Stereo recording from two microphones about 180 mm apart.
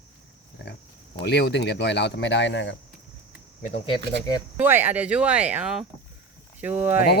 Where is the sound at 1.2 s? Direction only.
70° left (ahead or behind).